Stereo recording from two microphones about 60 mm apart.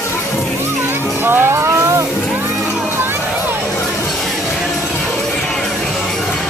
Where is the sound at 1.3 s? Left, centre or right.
Right.